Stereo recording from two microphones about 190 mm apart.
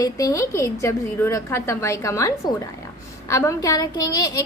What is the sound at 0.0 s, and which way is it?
A woman's voice, 15° left (ahead or behind).